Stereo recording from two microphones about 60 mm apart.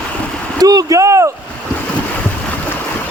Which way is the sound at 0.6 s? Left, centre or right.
Right.